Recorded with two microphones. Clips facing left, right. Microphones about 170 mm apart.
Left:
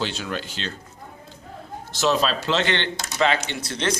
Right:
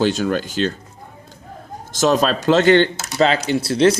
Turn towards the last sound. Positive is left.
turn(degrees=-35)  # may be behind; listen again after turning